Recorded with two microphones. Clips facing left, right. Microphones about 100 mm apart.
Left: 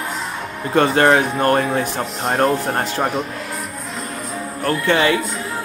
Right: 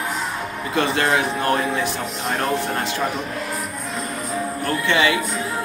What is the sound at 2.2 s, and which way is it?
Speech, 35° left (ahead or behind).